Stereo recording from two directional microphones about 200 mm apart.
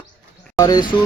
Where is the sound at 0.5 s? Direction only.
20° left (ahead or behind).